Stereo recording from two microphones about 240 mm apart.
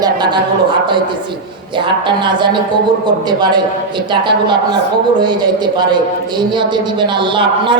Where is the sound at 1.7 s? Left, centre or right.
Centre.